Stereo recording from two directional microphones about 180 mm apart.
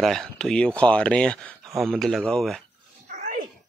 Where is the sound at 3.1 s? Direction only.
45° right (ahead or behind).